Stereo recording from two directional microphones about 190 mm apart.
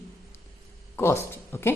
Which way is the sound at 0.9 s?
15° left (ahead or behind).